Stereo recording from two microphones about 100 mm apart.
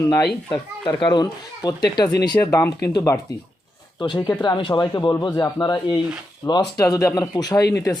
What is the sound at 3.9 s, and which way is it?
Speech, 50° left (ahead or behind).